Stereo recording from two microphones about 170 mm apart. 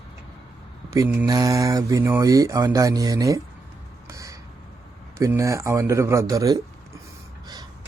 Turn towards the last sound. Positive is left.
turn(degrees=-20)  # may be behind; listen again after turning